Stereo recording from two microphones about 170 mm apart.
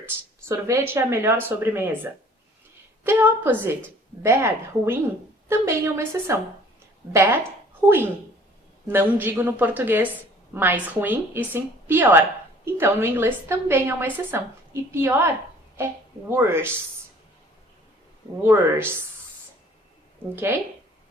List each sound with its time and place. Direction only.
0.0 s a woman's voice: 15° right (ahead or behind)
3.0 s a woman's voice: 10° right (ahead or behind)
16.3 s a woman's voice: 15° right (ahead or behind)
18.4 s a woman's voice: 15° right (ahead or behind)
20.3 s a woman's voice: 15° right (ahead or behind)